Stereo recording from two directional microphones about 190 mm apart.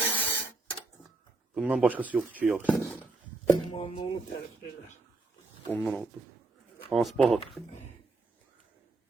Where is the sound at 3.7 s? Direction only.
30° left (ahead or behind).